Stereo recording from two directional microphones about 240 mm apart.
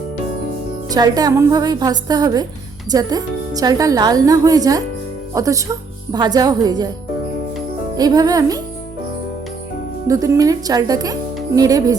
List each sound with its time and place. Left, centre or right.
0.9 s a woman's voice: centre
7.9 s a woman's voice: centre
10.1 s a woman's voice: centre